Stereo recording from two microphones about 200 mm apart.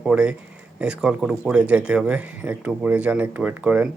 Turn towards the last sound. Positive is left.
turn(degrees=-5)  # may be behind; listen again after turning